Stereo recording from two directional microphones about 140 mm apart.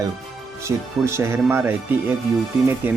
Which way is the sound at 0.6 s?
20° right (ahead or behind).